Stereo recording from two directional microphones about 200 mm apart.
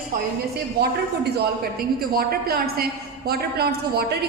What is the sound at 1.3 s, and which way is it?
A woman's voice, 50° right (ahead or behind).